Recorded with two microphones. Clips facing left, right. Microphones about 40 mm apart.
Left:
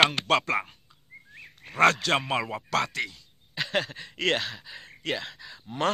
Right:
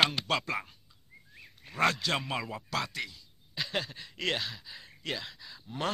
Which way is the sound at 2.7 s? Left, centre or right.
Left.